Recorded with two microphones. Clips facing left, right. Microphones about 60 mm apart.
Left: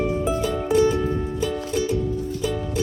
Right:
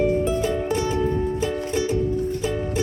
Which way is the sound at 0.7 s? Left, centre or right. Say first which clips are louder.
Left 6 dB; right.